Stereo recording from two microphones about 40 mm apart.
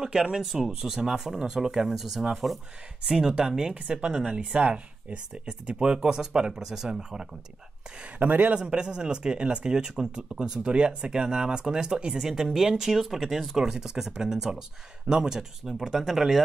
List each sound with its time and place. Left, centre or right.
0.0 s speech: centre
3.1 s speech: centre
8.2 s a man's voice: right
8.5 s speech: right
12.2 s speech: centre